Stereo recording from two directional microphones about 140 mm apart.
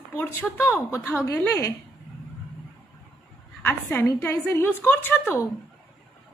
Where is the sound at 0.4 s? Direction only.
15° left (ahead or behind).